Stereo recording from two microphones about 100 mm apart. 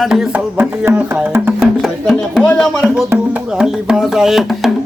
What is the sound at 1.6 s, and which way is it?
Speech, centre (ahead or behind).